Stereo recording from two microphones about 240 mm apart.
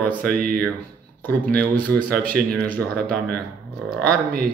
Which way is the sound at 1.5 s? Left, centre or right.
Centre.